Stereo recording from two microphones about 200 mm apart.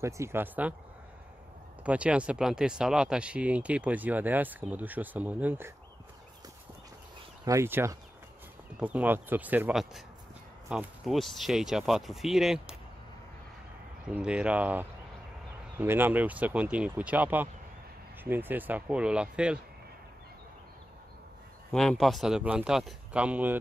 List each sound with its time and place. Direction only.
0.0 s speech: 15° right (ahead or behind)
1.8 s speech: 5° right (ahead or behind)
7.4 s speech: 15° right (ahead or behind)
14.0 s speech: 5° right (ahead or behind)
21.7 s speech: centre (ahead or behind)